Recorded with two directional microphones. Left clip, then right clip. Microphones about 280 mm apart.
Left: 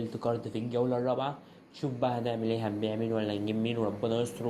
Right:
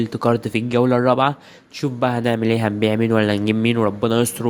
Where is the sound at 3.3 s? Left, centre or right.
Right.